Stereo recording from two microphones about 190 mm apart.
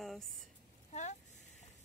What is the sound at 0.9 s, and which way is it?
Speech, 40° left (ahead or behind).